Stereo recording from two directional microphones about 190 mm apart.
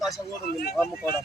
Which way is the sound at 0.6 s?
55° left (ahead or behind).